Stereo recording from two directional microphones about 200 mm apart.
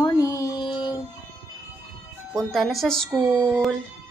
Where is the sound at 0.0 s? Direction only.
15° left (ahead or behind).